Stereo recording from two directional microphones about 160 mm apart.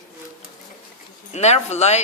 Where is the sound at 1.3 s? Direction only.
45° left (ahead or behind).